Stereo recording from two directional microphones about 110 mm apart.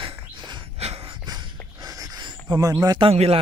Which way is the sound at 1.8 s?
35° right (ahead or behind).